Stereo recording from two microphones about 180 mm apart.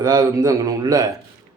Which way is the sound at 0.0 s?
20° right (ahead or behind).